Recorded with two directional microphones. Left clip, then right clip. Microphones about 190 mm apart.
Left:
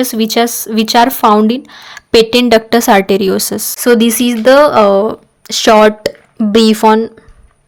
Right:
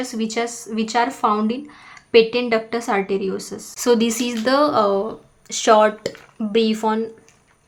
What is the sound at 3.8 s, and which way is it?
Speech, 35° left (ahead or behind).